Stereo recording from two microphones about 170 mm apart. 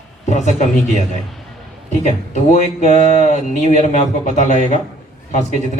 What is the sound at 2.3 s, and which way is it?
A man's voice, 45° left (ahead or behind).